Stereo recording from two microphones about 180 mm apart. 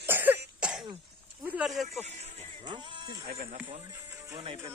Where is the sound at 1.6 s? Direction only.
Centre (ahead or behind).